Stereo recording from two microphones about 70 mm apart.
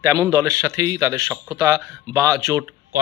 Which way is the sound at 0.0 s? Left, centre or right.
Right.